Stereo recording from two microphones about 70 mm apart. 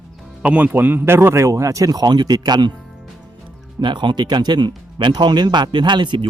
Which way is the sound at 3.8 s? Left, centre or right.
Right.